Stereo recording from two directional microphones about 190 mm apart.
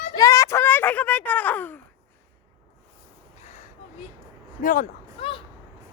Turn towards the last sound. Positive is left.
turn(degrees=30)  # may be behind; listen again after turning